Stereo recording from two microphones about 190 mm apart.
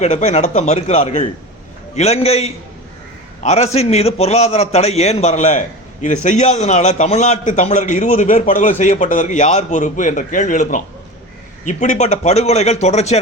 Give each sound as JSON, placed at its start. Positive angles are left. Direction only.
{"t": 0.0, "sound": "a man's voice", "side_deg": 35}